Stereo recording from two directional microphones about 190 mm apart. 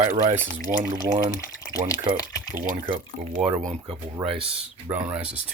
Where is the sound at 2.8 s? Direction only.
30° right (ahead or behind).